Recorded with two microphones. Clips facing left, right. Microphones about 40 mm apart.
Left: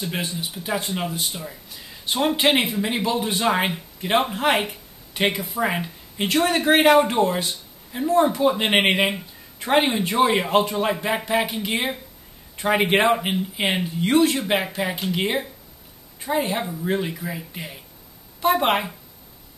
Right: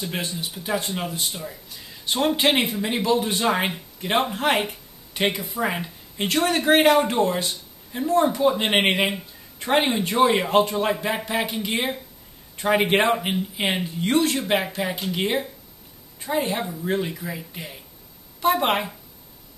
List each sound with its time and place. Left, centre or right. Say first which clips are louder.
0.0 s speech: left 1 dB; centre